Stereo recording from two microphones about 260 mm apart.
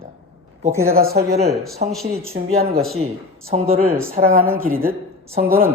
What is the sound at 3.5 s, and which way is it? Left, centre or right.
A woman's voice, right.